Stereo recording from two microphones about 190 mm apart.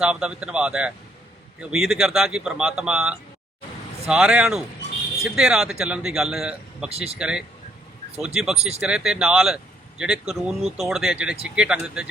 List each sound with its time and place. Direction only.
0.0 s a man's voice: 5° right (ahead or behind)
6.9 s speech: 30° right (ahead or behind)
7.2 s a man's voice: 5° right (ahead or behind)